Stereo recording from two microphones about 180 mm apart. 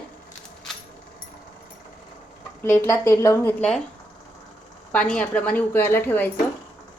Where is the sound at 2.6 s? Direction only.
15° left (ahead or behind).